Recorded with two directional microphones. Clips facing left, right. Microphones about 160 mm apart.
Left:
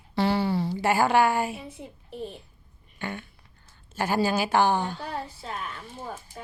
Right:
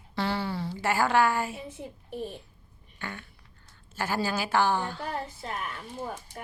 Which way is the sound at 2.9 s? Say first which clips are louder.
Left 5 dB; 20° left (ahead or behind).